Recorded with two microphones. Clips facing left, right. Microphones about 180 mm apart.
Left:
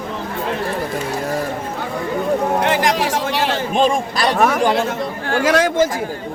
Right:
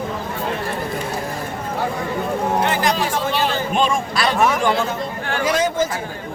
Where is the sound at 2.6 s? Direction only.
85° left.